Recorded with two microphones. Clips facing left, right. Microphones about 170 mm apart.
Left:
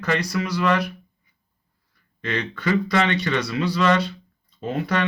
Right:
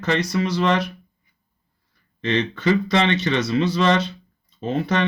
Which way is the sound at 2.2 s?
25° right (ahead or behind).